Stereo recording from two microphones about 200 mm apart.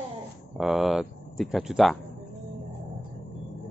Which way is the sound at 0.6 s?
Centre (ahead or behind).